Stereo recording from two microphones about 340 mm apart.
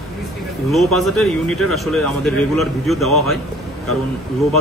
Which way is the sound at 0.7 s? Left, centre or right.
Centre.